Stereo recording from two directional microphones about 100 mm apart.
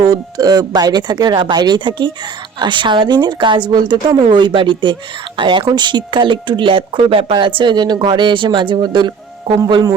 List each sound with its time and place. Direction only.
0.0 s speech: 40° right (ahead or behind)